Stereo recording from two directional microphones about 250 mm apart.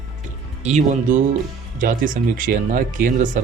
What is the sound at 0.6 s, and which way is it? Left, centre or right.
Speech, right.